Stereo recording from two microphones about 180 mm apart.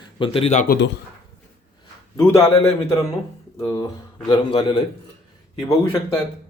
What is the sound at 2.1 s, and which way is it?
Speech, 15° left (ahead or behind).